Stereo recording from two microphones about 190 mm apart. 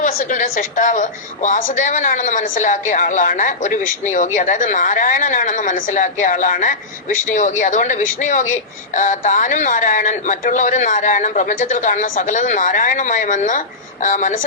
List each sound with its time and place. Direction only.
0.0 s a woman's voice: 45° left (ahead or behind)